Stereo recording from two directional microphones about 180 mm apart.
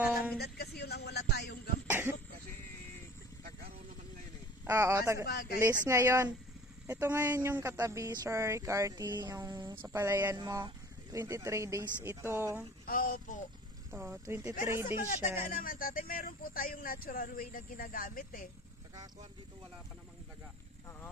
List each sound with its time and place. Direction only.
0.0 s a sound: 10° right (ahead or behind)
0.4 s a sound: 60° left (ahead or behind)
1.9 s cough: 10° right (ahead or behind)
4.6 s speech: 15° right (ahead or behind)
5.2 s speech: 60° left (ahead or behind)
5.6 s speech: 15° right (ahead or behind)
12.8 s speech: 50° left (ahead or behind)
13.9 s speech: 15° right (ahead or behind)
15.5 s speech: 50° left (ahead or behind)